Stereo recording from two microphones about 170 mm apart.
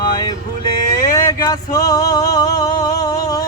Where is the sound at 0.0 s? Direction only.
25° left (ahead or behind).